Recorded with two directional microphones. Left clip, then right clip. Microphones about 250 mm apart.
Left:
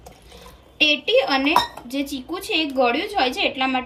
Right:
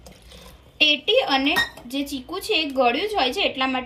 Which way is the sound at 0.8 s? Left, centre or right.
Right.